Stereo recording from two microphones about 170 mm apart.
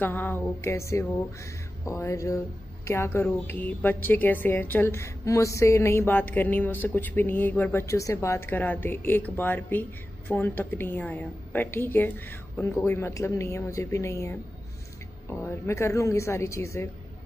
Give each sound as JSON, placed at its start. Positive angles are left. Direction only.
{"t": 0.0, "sound": "a woman's voice", "side_deg": 10}
{"t": 1.9, "sound": "music", "side_deg": 20}
{"t": 2.9, "sound": "a woman's voice", "side_deg": 15}